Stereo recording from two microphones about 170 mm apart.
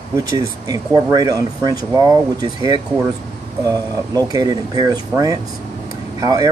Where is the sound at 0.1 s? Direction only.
20° right (ahead or behind).